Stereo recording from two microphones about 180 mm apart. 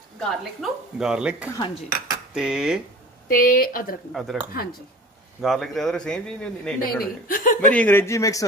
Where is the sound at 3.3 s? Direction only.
50° left (ahead or behind).